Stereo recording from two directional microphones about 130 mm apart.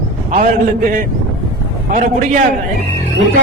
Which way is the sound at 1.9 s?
90° right.